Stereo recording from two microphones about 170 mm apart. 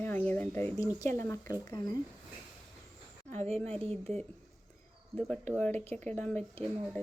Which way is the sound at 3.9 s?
5° left (ahead or behind).